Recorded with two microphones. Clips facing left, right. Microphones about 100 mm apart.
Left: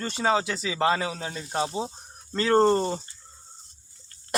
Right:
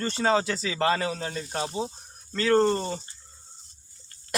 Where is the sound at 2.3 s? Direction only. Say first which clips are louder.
Left 2 dB; 30° left (ahead or behind).